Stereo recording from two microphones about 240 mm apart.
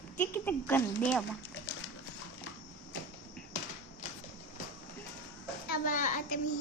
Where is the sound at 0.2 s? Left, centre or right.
Centre.